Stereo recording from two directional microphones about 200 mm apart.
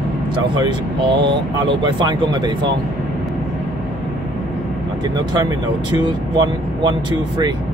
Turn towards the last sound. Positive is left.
turn(degrees=-20)  # may be behind; listen again after turning